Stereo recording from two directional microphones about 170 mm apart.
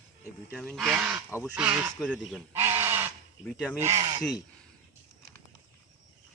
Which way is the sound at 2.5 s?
15° right (ahead or behind).